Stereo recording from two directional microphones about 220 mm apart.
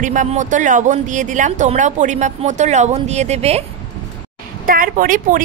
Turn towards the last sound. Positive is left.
turn(degrees=-40)  # may be behind; listen again after turning